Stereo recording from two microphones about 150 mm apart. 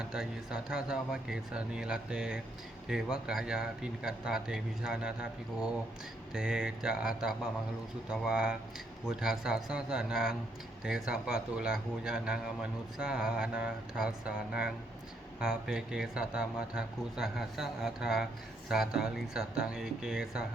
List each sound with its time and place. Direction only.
0.0 s speech: 5° right (ahead or behind)
6.3 s speech: 5° right (ahead or behind)